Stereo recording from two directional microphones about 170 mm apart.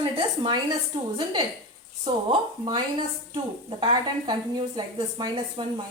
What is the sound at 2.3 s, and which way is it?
A woman's voice, 25° right (ahead or behind).